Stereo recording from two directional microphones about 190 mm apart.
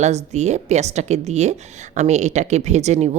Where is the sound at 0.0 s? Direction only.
35° right (ahead or behind).